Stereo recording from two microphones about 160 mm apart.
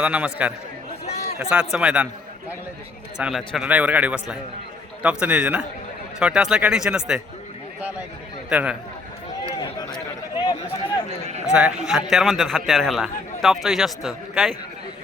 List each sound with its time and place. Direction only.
0.0 s a man's voice: 5° right (ahead or behind)
3.2 s a man's voice: 5° right (ahead or behind)
8.4 s speech: 10° right (ahead or behind)
9.6 s a sound: 30° left (ahead or behind)
11.4 s a man's voice: 5° right (ahead or behind)